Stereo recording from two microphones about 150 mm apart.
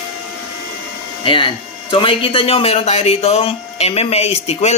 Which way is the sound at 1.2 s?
35° left (ahead or behind).